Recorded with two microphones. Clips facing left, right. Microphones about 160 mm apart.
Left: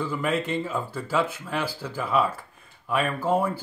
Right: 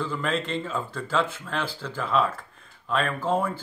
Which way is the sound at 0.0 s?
10° left (ahead or behind).